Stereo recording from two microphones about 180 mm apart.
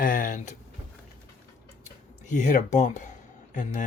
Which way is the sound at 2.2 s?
45° left (ahead or behind).